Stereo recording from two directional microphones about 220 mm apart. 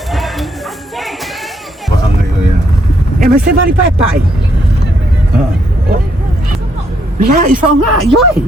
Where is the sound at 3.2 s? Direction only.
40° right (ahead or behind).